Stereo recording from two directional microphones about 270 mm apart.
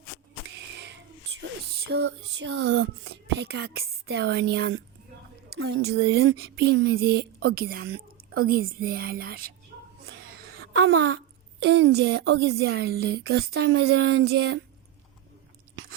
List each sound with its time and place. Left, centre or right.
1.4 s a sound: right
3.8 s speech: right
10.6 s speech: right